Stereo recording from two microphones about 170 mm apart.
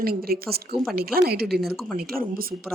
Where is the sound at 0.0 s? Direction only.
60° right (ahead or behind).